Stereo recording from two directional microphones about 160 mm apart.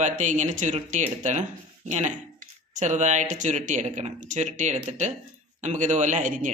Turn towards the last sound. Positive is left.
turn(degrees=-55)  # may be behind; listen again after turning